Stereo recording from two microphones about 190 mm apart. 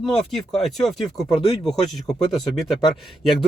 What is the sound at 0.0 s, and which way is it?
Speech, centre (ahead or behind).